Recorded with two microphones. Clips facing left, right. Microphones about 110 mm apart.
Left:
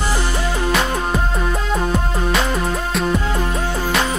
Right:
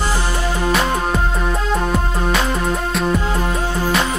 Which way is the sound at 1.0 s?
Centre (ahead or behind).